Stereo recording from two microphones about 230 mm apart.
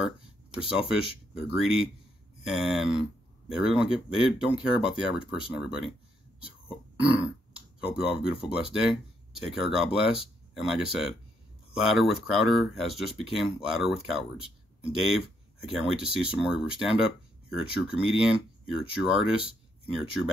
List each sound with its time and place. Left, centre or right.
1.3 s speech: centre
7.0 s burping: right
7.5 s speech: centre